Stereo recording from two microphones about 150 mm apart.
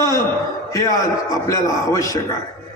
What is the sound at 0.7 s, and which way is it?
A man's voice, 20° left (ahead or behind).